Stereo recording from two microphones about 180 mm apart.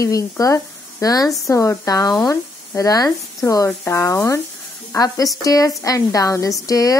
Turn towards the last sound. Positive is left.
turn(degrees=20)  # may be behind; listen again after turning